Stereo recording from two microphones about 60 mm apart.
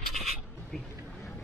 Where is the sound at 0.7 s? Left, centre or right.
Centre.